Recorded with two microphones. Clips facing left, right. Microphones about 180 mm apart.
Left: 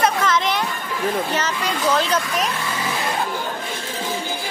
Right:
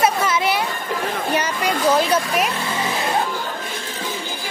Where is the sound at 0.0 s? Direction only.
10° right (ahead or behind).